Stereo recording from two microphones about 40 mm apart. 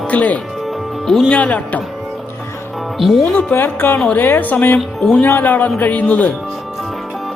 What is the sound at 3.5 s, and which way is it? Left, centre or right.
Speech, left.